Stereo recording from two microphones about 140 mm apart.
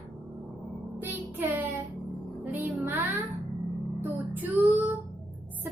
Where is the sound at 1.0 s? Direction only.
15° right (ahead or behind).